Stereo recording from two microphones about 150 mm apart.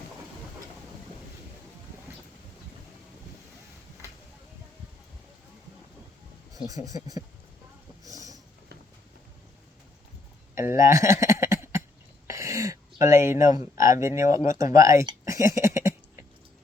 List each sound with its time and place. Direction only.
6.7 s speech: 25° right (ahead or behind)
8.0 s a sound: 25° right (ahead or behind)
10.5 s a sound: 20° right (ahead or behind)
13.6 s speech: 20° right (ahead or behind)
14.1 s speech: 60° left (ahead or behind)
14.4 s speech: 20° right (ahead or behind)